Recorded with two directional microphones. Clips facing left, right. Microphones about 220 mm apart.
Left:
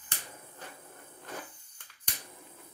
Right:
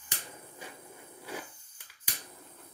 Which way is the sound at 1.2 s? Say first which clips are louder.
Right 2 dB; 10° right (ahead or behind).